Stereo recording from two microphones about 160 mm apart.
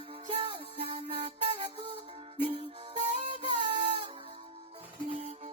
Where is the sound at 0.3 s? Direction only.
35° right (ahead or behind).